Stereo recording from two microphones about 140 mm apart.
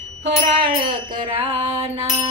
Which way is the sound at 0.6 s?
85° right.